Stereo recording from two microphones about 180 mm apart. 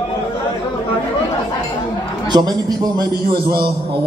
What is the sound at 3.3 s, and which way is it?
Speech, 60° right (ahead or behind).